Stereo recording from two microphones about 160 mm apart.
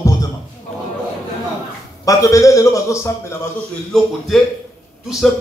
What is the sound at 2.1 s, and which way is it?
Speech, 20° left (ahead or behind).